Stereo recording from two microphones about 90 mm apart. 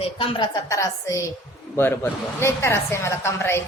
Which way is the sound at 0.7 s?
35° left (ahead or behind).